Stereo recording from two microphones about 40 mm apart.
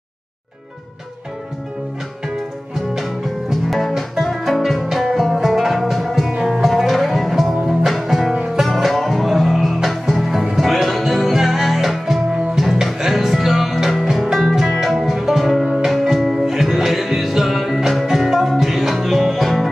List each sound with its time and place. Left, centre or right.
3.9 s music: centre